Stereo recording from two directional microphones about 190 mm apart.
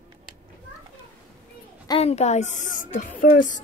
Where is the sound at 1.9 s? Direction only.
30° left (ahead or behind).